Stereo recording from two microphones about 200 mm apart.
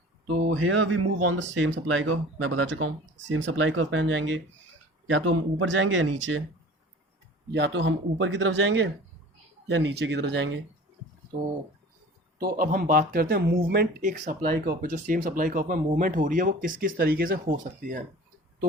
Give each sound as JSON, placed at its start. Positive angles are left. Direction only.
{"t": 0.3, "sound": "speech", "side_deg": -35}
{"t": 0.5, "sound": "speech", "side_deg": -80}
{"t": 5.0, "sound": "speech", "side_deg": -80}
{"t": 7.5, "sound": "speech", "side_deg": -60}
{"t": 12.4, "sound": "speech", "side_deg": -45}